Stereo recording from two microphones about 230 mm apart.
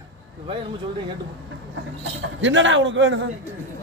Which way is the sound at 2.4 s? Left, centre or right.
Right.